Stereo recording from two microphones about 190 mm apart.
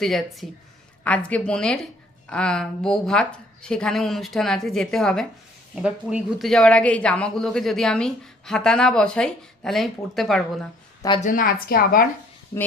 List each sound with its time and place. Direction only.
0.0 s speech: centre (ahead or behind)
11.2 s a woman's voice: 45° left (ahead or behind)